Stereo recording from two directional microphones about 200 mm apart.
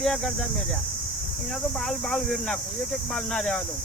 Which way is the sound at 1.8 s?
Centre (ahead or behind).